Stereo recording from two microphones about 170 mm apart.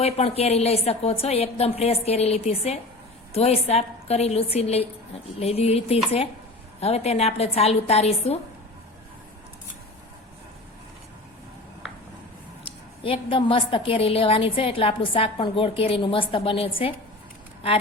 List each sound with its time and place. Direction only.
0.0 s a woman's voice: 35° left (ahead or behind)
13.0 s a woman's voice: 30° left (ahead or behind)